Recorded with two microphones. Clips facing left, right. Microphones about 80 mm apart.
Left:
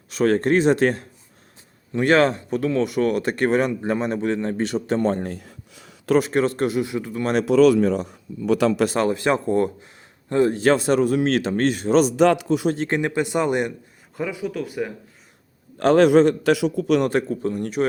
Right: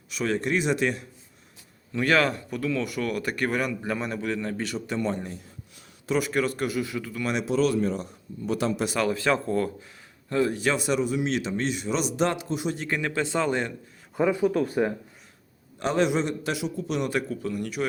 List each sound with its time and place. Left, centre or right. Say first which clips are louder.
0.2 s speech: left 8 dB; left
1.9 s speech: left 6 dB; left
4.9 s speech: left 6 dB; left
5.2 s a sound: left 7 dB; left
6.1 s speech: left 6 dB; left
7.4 s a man's voice: left 9 dB; left
9.0 s speech: left 4 dB; left
10.2 s speech: left 7 dB; left
12.1 s a man's voice: left 9 dB; left
12.9 s speech: left 5 dB; left
14.2 s speech: right 4 dB; right
15.8 s a man's voice: left 10 dB; left
17.1 s speech: left 6 dB; left